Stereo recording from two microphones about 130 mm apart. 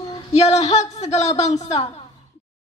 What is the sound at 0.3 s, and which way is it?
A man's voice, 60° left (ahead or behind).